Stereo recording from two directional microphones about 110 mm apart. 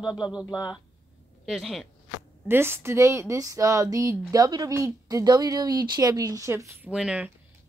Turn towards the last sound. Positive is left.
turn(degrees=-10)  # may be behind; listen again after turning